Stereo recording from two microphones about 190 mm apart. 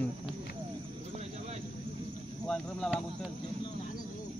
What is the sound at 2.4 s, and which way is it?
Speech, 5° left (ahead or behind).